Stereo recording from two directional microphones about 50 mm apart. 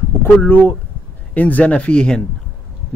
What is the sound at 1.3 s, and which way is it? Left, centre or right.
Speech, left.